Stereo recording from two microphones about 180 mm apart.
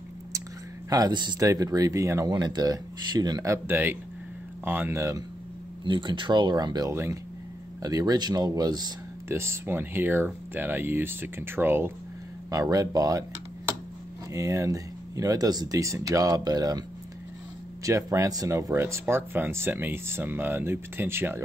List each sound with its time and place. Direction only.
0.8 s speech: 20° right (ahead or behind)
5.9 s speech: 25° right (ahead or behind)
14.3 s speech: 15° right (ahead or behind)
17.8 s speech: 15° right (ahead or behind)